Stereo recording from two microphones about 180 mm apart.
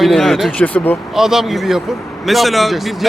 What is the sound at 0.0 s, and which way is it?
Speech, centre (ahead or behind).